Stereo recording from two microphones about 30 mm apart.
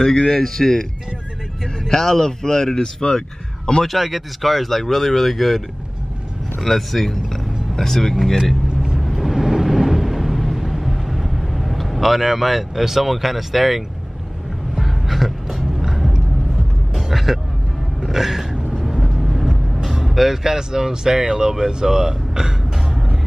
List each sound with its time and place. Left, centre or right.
0.0 s speech: centre
1.9 s speech: centre
3.8 s speech: centre
6.6 s speech: centre
8.9 s a sound: centre
14.8 s music: centre
15.8 s a sound: centre
18.7 s vehicle: centre
20.4 s speech: centre